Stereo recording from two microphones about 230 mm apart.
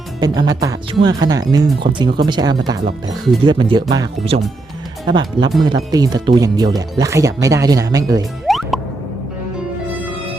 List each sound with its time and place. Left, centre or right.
0.2 s speech: centre
8.4 s music: centre